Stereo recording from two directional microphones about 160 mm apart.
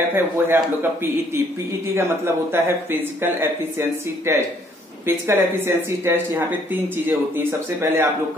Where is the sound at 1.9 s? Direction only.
15° right (ahead or behind).